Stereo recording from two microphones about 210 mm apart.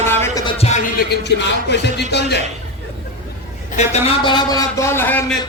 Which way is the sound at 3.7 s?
30° left (ahead or behind).